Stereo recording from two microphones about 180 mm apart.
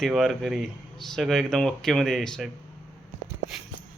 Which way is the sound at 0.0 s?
Centre (ahead or behind).